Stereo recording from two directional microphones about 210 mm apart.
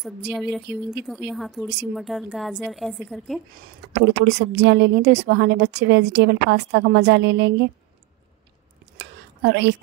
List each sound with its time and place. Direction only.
0.3 s a woman's voice: 5° right (ahead or behind)
3.9 s a woman's voice: 55° right (ahead or behind)
8.9 s whispering: 55° right (ahead or behind)